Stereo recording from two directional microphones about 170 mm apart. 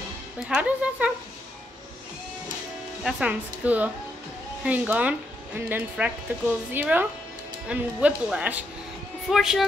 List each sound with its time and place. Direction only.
0.5 s speech: 10° right (ahead or behind)
3.0 s speech: 5° right (ahead or behind)